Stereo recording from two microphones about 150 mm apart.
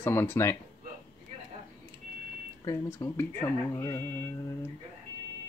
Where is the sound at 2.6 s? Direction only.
20° left (ahead or behind).